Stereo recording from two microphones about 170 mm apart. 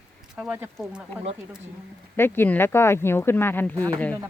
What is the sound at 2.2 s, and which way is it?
Speech, 15° left (ahead or behind).